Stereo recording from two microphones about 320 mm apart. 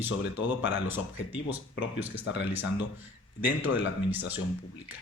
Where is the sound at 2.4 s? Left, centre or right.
Centre.